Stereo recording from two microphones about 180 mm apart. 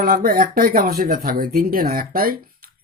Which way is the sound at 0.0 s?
55° right (ahead or behind).